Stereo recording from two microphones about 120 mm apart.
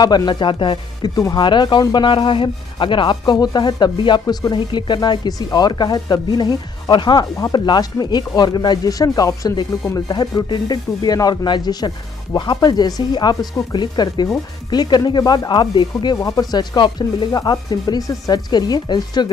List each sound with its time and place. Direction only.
0.0 s speech: 35° left (ahead or behind)
1.1 s speech: 30° left (ahead or behind)
1.4 s speech: 40° left (ahead or behind)